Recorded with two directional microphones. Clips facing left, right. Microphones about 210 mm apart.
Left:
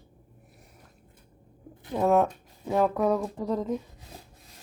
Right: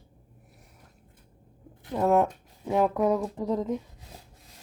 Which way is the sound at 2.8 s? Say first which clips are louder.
Even; 15° right (ahead or behind).